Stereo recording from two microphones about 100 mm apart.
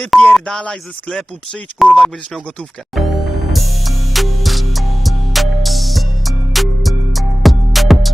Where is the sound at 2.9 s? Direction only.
Centre (ahead or behind).